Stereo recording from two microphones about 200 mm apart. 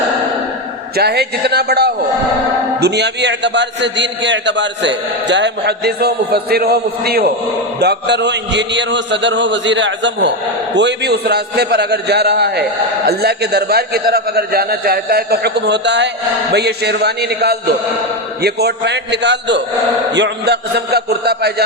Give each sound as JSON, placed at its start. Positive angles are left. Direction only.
{"t": 0.9, "sound": "a man's voice", "side_deg": -55}